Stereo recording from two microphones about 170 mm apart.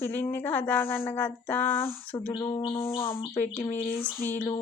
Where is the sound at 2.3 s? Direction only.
25° left (ahead or behind).